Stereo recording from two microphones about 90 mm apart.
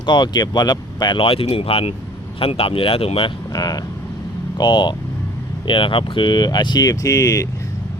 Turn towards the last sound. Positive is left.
turn(degrees=35)  # may be behind; listen again after turning